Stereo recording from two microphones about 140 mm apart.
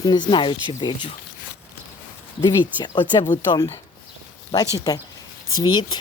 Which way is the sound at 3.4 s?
25° left (ahead or behind).